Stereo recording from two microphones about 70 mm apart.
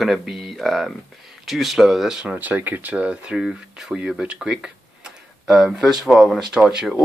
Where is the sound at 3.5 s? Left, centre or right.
Centre.